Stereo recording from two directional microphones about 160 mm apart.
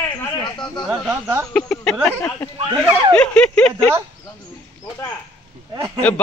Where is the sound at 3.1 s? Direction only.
5° left (ahead or behind).